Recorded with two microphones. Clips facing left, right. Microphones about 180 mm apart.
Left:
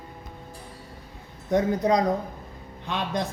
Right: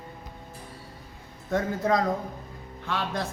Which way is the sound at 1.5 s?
20° left (ahead or behind).